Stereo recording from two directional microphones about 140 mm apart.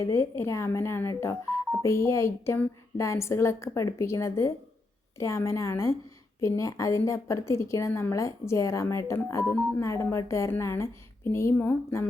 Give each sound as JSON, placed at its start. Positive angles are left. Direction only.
{"t": 0.0, "sound": "speech", "side_deg": 20}